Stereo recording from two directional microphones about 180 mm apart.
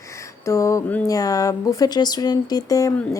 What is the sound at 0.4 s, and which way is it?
Speech, 15° left (ahead or behind).